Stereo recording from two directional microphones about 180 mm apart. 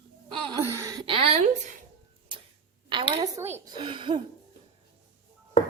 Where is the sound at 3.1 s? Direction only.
25° right (ahead or behind).